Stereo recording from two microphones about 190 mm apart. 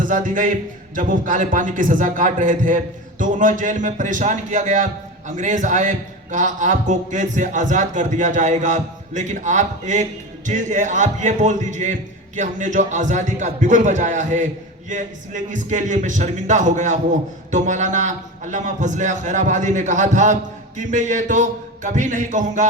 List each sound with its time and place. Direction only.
0.0 s a man's voice: 45° right (ahead or behind)